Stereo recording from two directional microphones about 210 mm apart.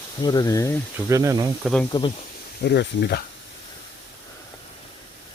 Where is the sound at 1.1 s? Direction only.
15° right (ahead or behind).